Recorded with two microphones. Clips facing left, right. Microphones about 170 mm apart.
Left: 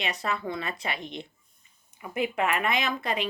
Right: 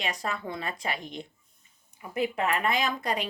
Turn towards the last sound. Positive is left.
turn(degrees=-40)  # may be behind; listen again after turning